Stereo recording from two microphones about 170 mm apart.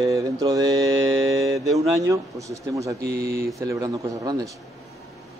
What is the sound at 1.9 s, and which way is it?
Speech, 20° right (ahead or behind).